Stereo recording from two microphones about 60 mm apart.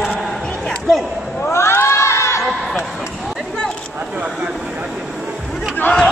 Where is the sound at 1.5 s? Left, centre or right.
Left.